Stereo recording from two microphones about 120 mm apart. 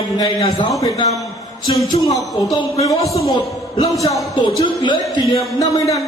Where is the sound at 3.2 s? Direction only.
30° left (ahead or behind).